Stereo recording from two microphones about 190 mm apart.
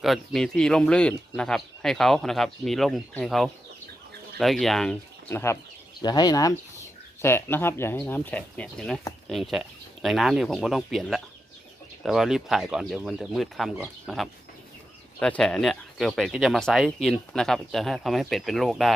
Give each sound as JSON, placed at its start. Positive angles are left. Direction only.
{"t": 0.0, "sound": "speech", "side_deg": 0}